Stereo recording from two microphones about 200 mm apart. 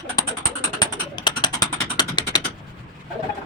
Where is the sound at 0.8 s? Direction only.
20° left (ahead or behind).